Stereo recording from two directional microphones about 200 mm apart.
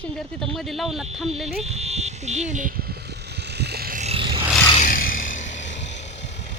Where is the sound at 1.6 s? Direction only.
35° right (ahead or behind); by 4.0 s 50° right (ahead or behind).